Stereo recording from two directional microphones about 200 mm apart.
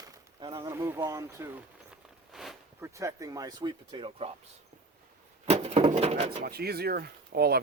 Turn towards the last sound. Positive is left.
turn(degrees=-50)  # may be behind; listen again after turning